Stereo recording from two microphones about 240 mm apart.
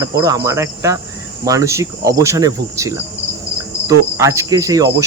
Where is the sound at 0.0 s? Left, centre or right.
Centre.